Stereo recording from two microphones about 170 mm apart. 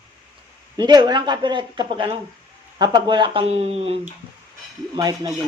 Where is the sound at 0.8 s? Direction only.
25° right (ahead or behind).